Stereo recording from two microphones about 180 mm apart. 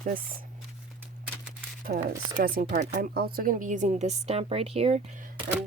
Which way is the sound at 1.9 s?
55° right (ahead or behind).